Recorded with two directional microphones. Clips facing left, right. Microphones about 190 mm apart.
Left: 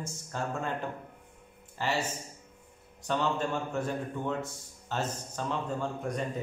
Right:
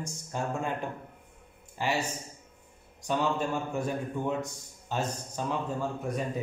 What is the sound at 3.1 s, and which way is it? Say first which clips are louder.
A man's voice: right 1 dB; 10° right (ahead or behind).